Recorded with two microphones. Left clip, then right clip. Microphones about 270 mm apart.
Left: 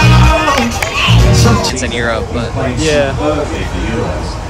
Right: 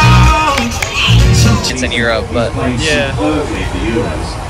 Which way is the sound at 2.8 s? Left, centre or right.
Left.